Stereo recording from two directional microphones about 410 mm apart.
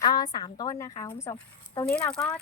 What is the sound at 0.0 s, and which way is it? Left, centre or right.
Speech, centre.